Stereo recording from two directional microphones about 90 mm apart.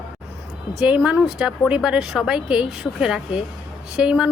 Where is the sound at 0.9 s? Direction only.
20° right (ahead or behind).